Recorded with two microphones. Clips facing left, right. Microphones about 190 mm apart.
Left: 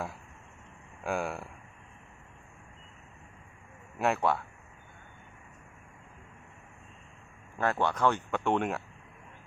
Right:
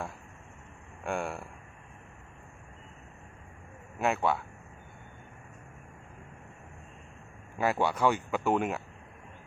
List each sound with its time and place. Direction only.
1.0 s speech: centre (ahead or behind)
3.9 s speech: centre (ahead or behind)
7.6 s speech: 10° right (ahead or behind)